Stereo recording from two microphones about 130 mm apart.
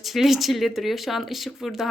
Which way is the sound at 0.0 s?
Centre (ahead or behind).